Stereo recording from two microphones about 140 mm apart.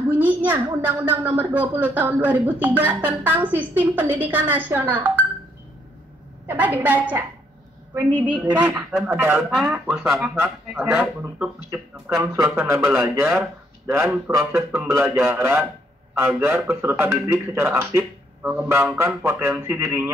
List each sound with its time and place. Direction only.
0.1 s a sound: 10° right (ahead or behind)
0.7 s speech: 15° right (ahead or behind)
6.4 s a man's voice: 10° right (ahead or behind)